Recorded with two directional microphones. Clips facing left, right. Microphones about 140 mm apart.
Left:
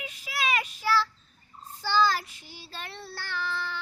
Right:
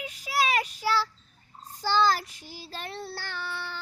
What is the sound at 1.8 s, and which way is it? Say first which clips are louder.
Child singing: right 1 dB; 40° right (ahead or behind).